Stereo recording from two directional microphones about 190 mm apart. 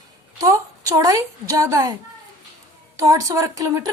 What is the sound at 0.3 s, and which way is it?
A woman's voice, 15° right (ahead or behind).